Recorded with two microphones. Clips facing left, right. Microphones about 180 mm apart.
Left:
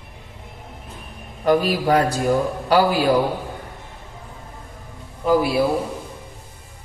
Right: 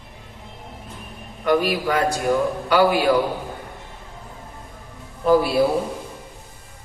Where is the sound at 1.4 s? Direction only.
35° left (ahead or behind).